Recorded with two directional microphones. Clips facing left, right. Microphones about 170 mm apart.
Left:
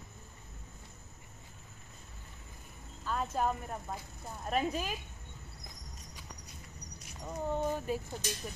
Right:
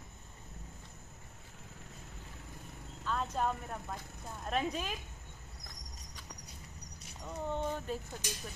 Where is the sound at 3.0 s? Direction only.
5° left (ahead or behind).